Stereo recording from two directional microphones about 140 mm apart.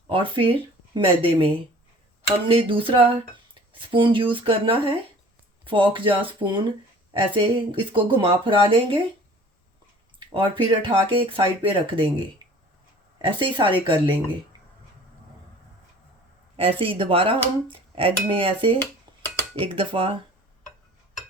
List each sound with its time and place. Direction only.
0.1 s speech: 40° right (ahead or behind)
10.2 s speech: 35° right (ahead or behind)
12.4 s a sound: 30° right (ahead or behind)
13.2 s speech: 35° right (ahead or behind)
16.6 s speech: 40° right (ahead or behind)